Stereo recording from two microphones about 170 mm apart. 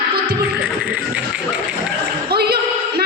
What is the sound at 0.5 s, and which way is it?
Music, 5° right (ahead or behind).